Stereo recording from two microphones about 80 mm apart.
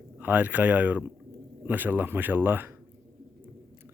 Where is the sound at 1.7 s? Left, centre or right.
Right.